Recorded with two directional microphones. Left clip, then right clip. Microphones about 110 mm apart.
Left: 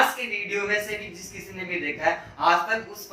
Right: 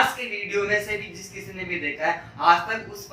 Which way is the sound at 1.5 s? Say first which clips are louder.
Right 1 dB; centre (ahead or behind).